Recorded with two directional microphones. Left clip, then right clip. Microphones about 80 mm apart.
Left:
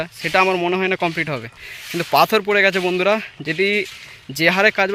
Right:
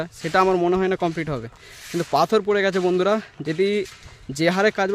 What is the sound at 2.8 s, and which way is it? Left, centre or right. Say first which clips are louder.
Speech: left 2 dB; right.